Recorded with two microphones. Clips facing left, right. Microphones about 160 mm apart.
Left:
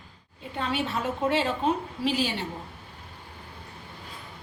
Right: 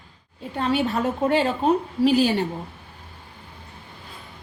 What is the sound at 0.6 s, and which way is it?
A woman's voice, 45° right (ahead or behind).